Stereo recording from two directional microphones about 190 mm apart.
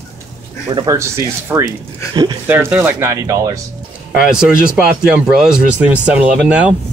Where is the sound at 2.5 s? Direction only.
10° right (ahead or behind).